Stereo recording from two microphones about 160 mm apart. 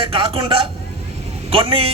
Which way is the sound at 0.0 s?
35° right (ahead or behind).